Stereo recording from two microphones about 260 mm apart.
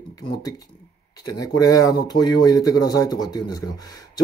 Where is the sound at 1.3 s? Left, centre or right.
Centre.